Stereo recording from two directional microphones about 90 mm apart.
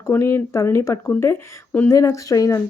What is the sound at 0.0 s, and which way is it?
Speech, 30° left (ahead or behind).